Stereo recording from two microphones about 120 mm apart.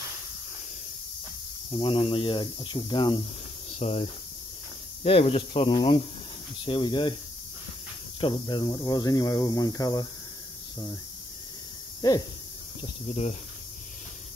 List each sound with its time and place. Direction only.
1.7 s speech: 45° left (ahead or behind)
3.7 s speech: 55° left (ahead or behind)
8.2 s speech: 40° left (ahead or behind)
12.0 s speech: 30° left (ahead or behind)
13.1 s speech: 60° left (ahead or behind)